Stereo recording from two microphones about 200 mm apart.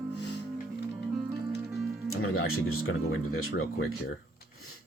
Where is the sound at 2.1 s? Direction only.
90° left.